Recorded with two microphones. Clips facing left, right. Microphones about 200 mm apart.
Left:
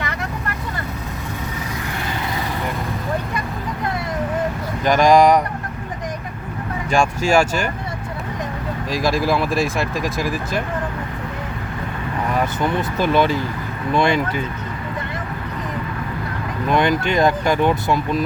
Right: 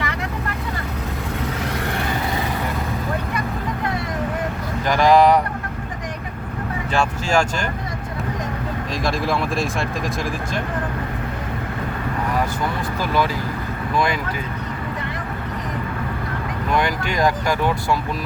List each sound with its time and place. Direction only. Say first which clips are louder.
4.9 s speech: left 2 dB; 15° left (ahead or behind)
6.9 s speech: left 4 dB; 10° left (ahead or behind)
8.9 s speech: left 4 dB; centre (ahead or behind)
13.0 s speech: left 4 dB; 25° left (ahead or behind)
16.7 s speech: left 4 dB; 20° left (ahead or behind)